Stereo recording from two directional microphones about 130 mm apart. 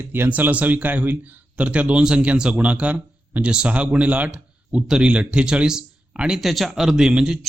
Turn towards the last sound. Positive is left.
turn(degrees=-5)  # may be behind; listen again after turning